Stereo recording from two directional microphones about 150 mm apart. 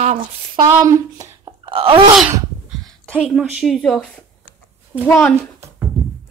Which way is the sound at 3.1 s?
10° left (ahead or behind).